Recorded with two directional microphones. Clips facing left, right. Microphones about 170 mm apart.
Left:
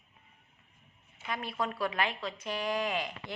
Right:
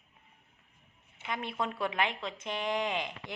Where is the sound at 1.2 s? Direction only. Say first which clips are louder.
Even; 20° right (ahead or behind).